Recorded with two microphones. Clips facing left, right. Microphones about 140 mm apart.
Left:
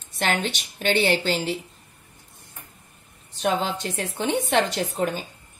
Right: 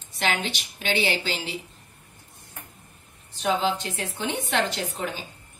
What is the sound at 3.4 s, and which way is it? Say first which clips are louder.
Speech: even; 45° left (ahead or behind).